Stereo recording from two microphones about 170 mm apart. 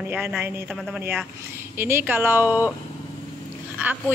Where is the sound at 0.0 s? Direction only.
5° right (ahead or behind).